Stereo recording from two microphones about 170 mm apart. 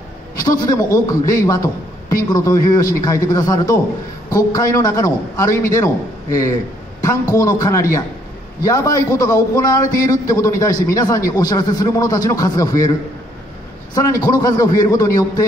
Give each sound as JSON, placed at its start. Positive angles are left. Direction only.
{"t": 0.4, "sound": "a man's voice", "side_deg": 20}
{"t": 7.0, "sound": "a man's voice", "side_deg": 20}
{"t": 13.9, "sound": "a man's voice", "side_deg": 20}